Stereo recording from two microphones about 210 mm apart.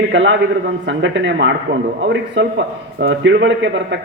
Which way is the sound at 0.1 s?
60° right (ahead or behind).